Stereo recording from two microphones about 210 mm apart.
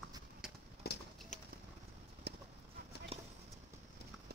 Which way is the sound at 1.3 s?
35° left (ahead or behind).